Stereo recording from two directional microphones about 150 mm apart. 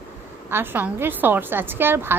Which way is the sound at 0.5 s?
15° right (ahead or behind).